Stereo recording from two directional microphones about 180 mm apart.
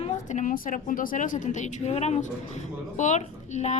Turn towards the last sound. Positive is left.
turn(degrees=40)  # may be behind; listen again after turning